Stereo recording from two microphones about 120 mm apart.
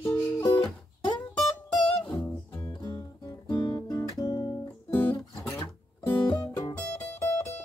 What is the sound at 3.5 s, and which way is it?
Music, 20° left (ahead or behind).